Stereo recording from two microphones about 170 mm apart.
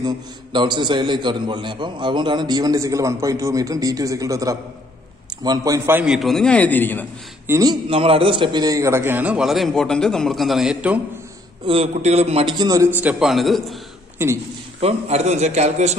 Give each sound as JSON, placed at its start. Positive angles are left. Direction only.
{"t": 0.0, "sound": "a man's voice", "side_deg": -25}
{"t": 7.4, "sound": "a man's voice", "side_deg": -20}
{"t": 7.9, "sound": "a man's voice", "side_deg": -35}
{"t": 11.6, "sound": "a man's voice", "side_deg": -35}
{"t": 14.1, "sound": "a man's voice", "side_deg": -15}
{"t": 14.8, "sound": "a man's voice", "side_deg": -40}